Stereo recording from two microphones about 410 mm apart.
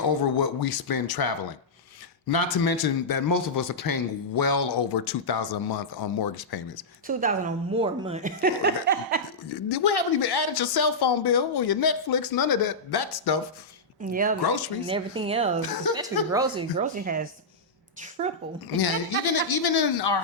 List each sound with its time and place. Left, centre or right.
0.1 s speech: left
7.1 s speech: centre
9.5 s speech: left
14.0 s speech: centre
14.4 s speech: left
14.8 s speech: centre
18.8 s speech: left